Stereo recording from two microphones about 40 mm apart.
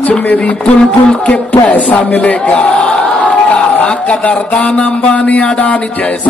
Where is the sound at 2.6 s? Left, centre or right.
Left.